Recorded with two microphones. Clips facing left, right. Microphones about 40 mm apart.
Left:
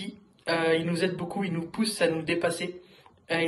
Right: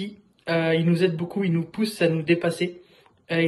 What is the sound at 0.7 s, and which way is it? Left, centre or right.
A man's voice, right.